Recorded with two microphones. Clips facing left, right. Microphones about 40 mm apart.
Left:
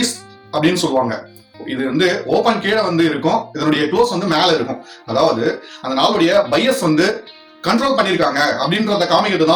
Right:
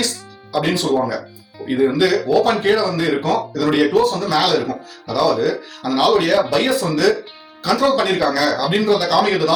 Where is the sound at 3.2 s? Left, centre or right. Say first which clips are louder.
Left 2 dB; left.